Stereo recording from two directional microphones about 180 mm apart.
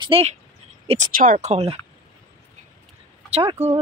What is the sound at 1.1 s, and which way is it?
Speech, 50° right (ahead or behind).